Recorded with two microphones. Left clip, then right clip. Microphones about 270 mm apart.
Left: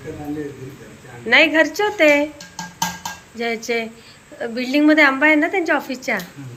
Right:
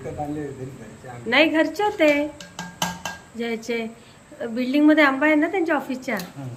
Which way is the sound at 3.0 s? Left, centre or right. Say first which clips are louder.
Left 4 dB; centre.